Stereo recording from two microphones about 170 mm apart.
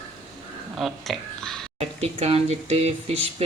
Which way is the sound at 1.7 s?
35° right (ahead or behind).